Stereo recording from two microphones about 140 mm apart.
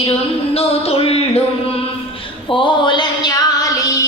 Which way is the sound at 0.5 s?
45° left (ahead or behind).